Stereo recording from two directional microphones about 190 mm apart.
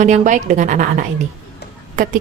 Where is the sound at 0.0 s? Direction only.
40° right (ahead or behind).